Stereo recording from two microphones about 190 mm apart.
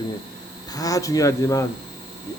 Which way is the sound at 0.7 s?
20° left (ahead or behind).